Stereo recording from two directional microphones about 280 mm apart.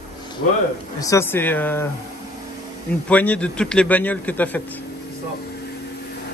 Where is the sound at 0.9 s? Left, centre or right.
Centre.